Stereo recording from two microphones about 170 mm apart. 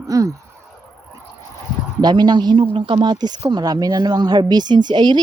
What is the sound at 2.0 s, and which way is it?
Speech, 25° right (ahead or behind).